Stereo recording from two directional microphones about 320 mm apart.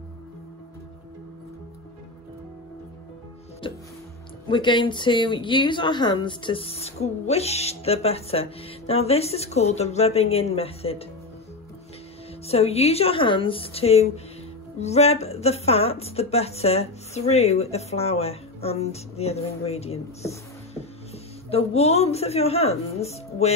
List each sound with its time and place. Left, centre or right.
3.6 s music: centre
4.5 s speech: centre
12.4 s speech: centre